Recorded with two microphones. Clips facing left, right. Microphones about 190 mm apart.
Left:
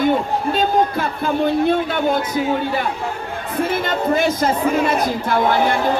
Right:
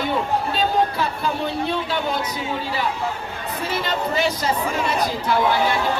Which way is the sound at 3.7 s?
50° left (ahead or behind).